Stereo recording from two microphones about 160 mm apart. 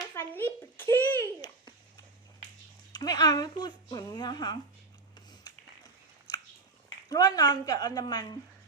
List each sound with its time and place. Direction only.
0.1 s a sound: 15° left (ahead or behind)
2.9 s speech: 25° left (ahead or behind)
5.3 s music: 25° left (ahead or behind)
7.1 s speech: 25° left (ahead or behind)